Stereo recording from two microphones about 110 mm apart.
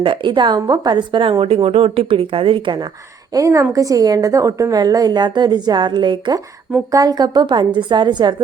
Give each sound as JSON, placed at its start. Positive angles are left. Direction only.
{"t": 0.0, "sound": "a woman's voice", "side_deg": -50}
{"t": 3.3, "sound": "a woman's voice", "side_deg": -30}